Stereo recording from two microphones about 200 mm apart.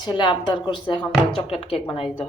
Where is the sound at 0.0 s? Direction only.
20° left (ahead or behind).